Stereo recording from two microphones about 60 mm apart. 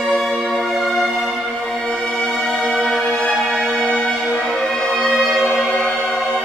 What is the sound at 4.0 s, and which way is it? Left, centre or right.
Music, centre.